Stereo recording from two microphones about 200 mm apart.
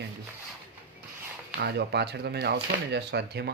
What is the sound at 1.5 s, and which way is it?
Speech, 55° right (ahead or behind).